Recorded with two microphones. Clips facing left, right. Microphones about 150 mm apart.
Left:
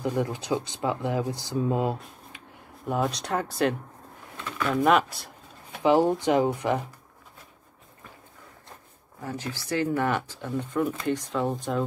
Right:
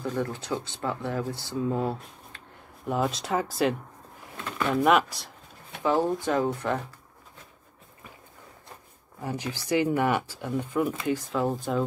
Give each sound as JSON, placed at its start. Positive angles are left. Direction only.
{"t": 0.0, "sound": "speech", "side_deg": 15}
{"t": 2.9, "sound": "speech", "side_deg": 0}
{"t": 4.8, "sound": "speech", "side_deg": 0}
{"t": 5.8, "sound": "speech", "side_deg": 20}
{"t": 9.2, "sound": "speech", "side_deg": -15}